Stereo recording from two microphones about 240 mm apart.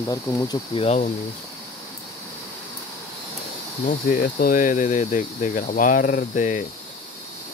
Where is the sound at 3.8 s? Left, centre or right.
Left.